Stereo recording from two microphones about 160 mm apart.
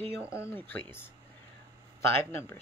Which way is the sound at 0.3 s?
15° left (ahead or behind).